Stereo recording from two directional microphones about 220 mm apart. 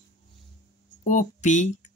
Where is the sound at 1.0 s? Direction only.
35° left (ahead or behind).